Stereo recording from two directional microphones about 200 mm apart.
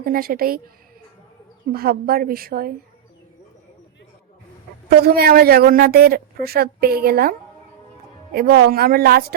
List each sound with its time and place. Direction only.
0.0 s a woman's voice: 45° right (ahead or behind)
1.7 s a woman's voice: 50° right (ahead or behind)
4.9 s a woman's voice: 50° right (ahead or behind)